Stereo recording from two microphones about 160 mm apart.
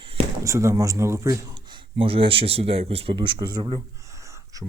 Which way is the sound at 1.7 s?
35° right (ahead or behind).